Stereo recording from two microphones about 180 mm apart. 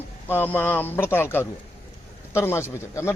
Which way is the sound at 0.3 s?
10° left (ahead or behind).